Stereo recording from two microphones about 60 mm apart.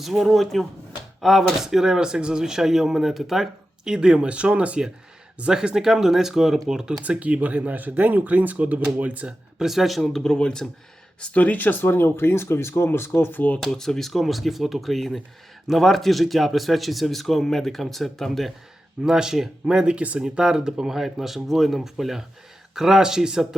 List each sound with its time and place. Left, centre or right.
0.0 s speech: centre
7.0 s speech: right
9.6 s speech: centre
11.2 s speech: left
13.6 s speech: centre
19.0 s speech: centre